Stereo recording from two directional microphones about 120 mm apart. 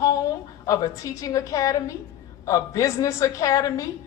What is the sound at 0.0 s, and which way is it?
A woman's voice, 30° left (ahead or behind).